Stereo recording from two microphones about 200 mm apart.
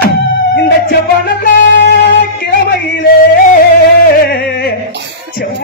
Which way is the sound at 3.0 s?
45° left (ahead or behind).